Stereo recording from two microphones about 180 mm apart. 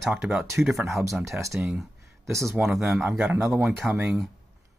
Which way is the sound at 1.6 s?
Centre (ahead or behind).